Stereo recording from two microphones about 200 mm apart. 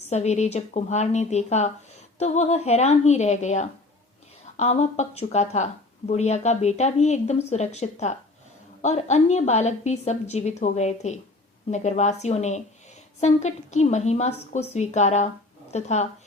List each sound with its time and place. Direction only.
0.1 s a woman's voice: 35° left (ahead or behind)